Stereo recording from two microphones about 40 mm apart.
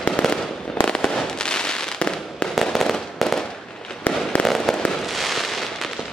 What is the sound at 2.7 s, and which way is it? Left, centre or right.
Fireworks, centre.